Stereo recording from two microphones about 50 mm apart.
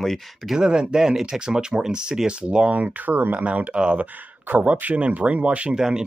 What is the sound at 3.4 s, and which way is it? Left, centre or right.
Speech, right.